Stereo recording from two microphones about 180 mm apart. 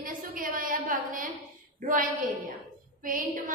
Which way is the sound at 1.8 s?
50° right (ahead or behind).